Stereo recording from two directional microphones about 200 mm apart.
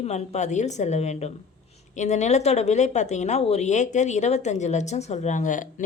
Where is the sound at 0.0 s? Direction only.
35° left (ahead or behind).